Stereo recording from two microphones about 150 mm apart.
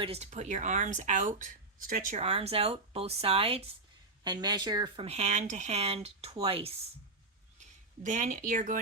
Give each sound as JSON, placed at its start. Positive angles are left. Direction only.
{"t": 0.0, "sound": "speech", "side_deg": -45}
{"t": 2.2, "sound": "speech", "side_deg": -40}
{"t": 4.2, "sound": "speech", "side_deg": -30}
{"t": 5.0, "sound": "speech", "side_deg": -50}
{"t": 7.6, "sound": "speech", "side_deg": -55}